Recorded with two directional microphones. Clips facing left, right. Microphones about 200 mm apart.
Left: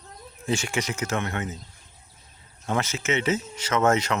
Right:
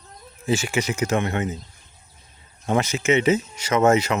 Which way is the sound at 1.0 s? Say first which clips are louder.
Right 6 dB; 15° right (ahead or behind).